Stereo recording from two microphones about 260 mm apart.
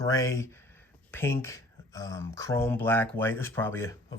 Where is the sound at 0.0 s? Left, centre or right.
Centre.